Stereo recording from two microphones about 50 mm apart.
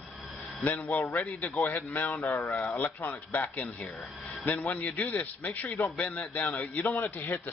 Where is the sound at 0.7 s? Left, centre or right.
Left.